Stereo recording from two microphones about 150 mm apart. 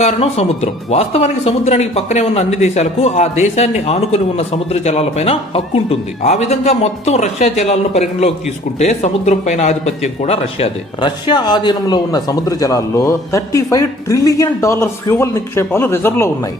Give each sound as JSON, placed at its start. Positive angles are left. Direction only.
{"t": 0.0, "sound": "speech", "side_deg": 45}